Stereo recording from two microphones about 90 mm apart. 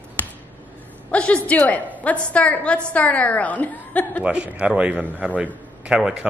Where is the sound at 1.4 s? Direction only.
15° left (ahead or behind).